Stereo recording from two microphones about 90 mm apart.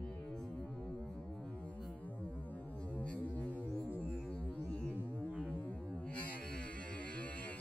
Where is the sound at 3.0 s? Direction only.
15° left (ahead or behind).